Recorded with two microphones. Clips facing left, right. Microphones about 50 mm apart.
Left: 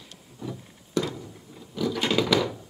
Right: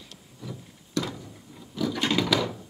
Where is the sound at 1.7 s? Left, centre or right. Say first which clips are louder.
Left 1 dB; centre.